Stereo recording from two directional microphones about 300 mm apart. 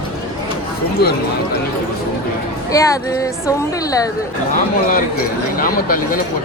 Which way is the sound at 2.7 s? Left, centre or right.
Centre.